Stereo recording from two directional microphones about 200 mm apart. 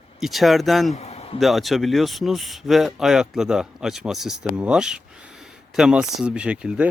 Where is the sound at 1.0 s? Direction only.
30° left (ahead or behind).